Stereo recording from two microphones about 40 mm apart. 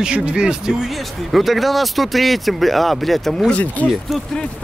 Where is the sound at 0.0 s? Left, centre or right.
Right.